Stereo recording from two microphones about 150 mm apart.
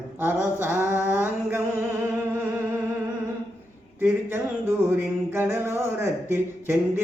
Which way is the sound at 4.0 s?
15° right (ahead or behind).